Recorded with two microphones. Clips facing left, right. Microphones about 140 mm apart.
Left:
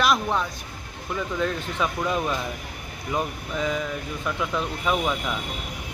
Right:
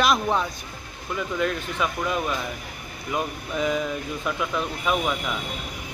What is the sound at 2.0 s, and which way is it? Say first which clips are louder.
Speech: left 2 dB; 5° left (ahead or behind).